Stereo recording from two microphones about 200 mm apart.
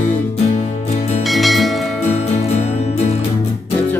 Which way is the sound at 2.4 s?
35° left (ahead or behind).